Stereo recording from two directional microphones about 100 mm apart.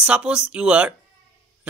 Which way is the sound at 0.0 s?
10° right (ahead or behind).